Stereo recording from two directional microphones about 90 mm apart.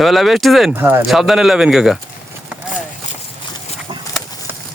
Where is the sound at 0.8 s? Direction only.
25° right (ahead or behind).